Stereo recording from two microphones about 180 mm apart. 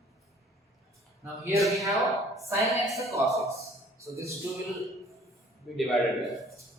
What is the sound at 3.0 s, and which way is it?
A man's voice, 15° right (ahead or behind).